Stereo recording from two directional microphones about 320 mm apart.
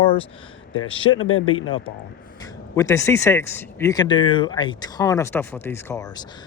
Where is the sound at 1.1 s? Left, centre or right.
Left.